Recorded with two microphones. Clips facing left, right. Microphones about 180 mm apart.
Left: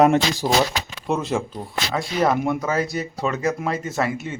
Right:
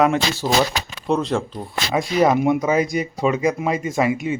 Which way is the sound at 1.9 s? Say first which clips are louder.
Right 4 dB; 10° right (ahead or behind).